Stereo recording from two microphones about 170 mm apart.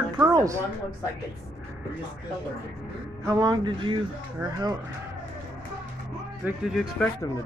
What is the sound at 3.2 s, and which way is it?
Speech, 20° right (ahead or behind).